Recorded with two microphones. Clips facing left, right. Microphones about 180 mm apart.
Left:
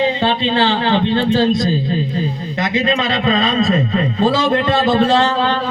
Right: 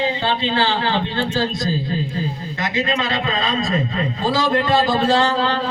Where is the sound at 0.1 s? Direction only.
20° left (ahead or behind).